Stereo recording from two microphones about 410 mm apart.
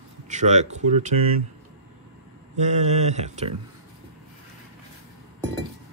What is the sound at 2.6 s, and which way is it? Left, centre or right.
Speech, centre.